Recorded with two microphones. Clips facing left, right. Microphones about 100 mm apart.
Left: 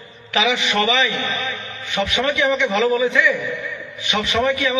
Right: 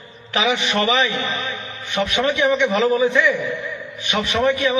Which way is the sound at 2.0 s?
5° right (ahead or behind).